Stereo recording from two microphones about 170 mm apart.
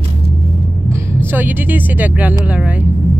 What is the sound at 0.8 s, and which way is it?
Speech, 15° right (ahead or behind).